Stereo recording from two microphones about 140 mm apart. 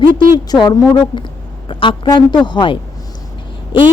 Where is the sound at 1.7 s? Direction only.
40° left (ahead or behind).